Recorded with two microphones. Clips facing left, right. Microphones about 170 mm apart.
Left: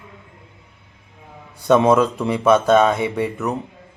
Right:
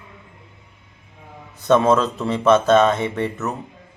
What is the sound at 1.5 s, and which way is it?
Speech, 10° left (ahead or behind).